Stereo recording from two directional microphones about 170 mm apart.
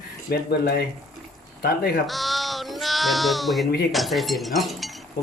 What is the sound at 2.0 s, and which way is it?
Sheep, centre (ahead or behind).